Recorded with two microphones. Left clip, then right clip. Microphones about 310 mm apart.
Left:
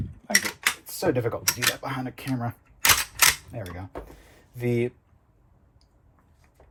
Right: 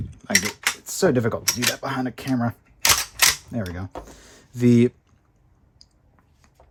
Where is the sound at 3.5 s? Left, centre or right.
Right.